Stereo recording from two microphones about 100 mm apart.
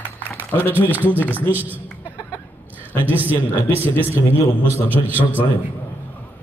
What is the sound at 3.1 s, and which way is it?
A man's voice, 20° right (ahead or behind).